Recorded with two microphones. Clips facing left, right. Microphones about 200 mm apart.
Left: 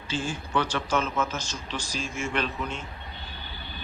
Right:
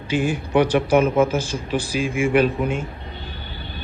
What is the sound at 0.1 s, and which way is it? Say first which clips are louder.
Speech: right 9 dB; 15° right (ahead or behind).